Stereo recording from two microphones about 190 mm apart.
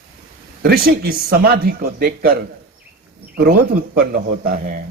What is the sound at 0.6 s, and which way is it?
Speech, 55° right (ahead or behind).